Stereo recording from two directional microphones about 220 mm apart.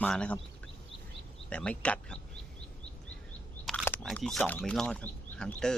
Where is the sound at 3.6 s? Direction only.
5° left (ahead or behind).